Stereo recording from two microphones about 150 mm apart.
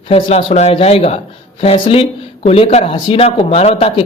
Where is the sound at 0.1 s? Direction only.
40° left (ahead or behind).